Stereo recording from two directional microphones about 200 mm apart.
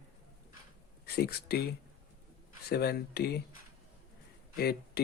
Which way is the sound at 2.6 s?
50° left (ahead or behind).